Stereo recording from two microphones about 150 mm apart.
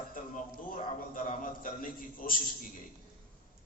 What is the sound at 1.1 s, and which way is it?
A man's voice, 65° left (ahead or behind).